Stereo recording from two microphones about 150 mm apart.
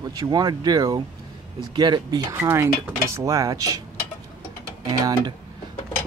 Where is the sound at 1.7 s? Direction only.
30° right (ahead or behind).